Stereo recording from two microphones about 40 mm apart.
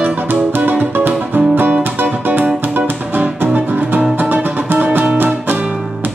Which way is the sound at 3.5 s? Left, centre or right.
Right.